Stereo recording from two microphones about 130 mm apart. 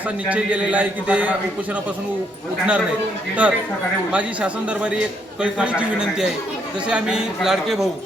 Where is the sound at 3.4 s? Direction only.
10° right (ahead or behind).